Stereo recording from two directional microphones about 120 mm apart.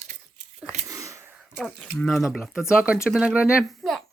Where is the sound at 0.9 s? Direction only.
25° right (ahead or behind).